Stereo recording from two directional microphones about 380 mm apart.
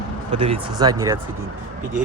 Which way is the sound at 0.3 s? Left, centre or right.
Centre.